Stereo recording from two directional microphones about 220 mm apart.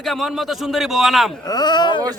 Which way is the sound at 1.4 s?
20° left (ahead or behind).